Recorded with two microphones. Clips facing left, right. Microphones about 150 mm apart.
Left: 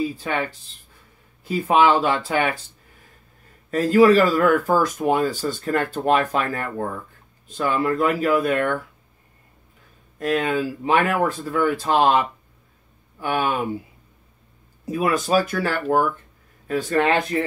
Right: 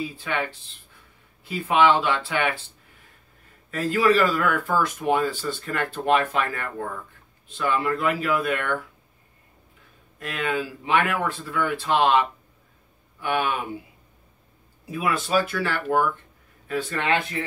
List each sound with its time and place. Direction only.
0.0 s speech: 40° left (ahead or behind)
3.7 s speech: 40° left (ahead or behind)
10.1 s speech: 40° left (ahead or behind)
14.9 s speech: 40° left (ahead or behind)